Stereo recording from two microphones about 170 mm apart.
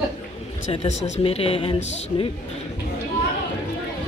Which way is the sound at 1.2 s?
35° left (ahead or behind).